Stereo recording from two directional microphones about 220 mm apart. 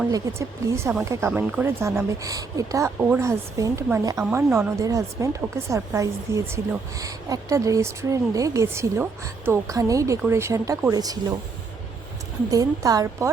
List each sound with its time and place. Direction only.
0.1 s a woman's voice: 15° right (ahead or behind)
12.5 s a woman's voice: 15° right (ahead or behind)